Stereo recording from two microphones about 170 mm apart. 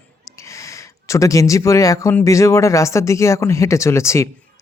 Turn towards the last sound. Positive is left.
turn(degrees=15)  # may be behind; listen again after turning